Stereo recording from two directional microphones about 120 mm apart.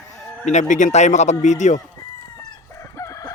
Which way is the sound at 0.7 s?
80° left.